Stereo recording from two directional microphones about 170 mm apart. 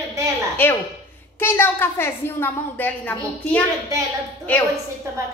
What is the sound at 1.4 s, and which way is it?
A woman's voice, 15° left (ahead or behind).